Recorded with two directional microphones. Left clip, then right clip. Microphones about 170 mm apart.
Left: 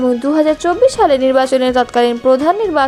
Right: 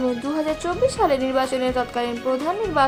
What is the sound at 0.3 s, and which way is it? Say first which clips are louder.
A woman's voice: left 11 dB; 40° left (ahead or behind).